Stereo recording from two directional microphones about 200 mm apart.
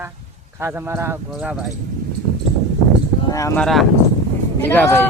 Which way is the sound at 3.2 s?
15° left (ahead or behind).